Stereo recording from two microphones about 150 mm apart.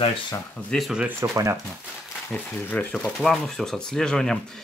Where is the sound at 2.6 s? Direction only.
10° left (ahead or behind).